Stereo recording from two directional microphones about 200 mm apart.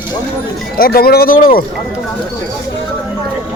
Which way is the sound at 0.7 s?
45° left (ahead or behind).